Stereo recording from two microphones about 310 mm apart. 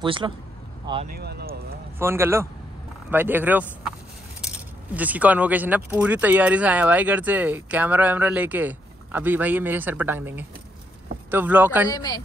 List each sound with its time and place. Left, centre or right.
0.0 s speech: centre
1.0 s speech: right
2.0 s speech: centre
11.9 s a man's voice: centre